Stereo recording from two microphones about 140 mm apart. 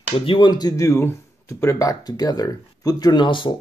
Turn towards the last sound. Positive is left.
turn(degrees=35)  # may be behind; listen again after turning